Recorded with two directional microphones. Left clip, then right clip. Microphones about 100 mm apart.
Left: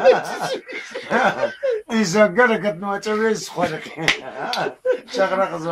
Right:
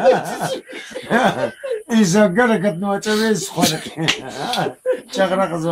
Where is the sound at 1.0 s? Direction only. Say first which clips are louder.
Right 2 dB; 40° right (ahead or behind).